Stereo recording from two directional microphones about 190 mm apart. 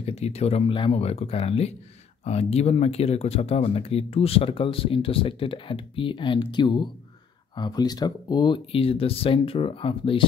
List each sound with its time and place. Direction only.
0.0 s speech: 35° left (ahead or behind)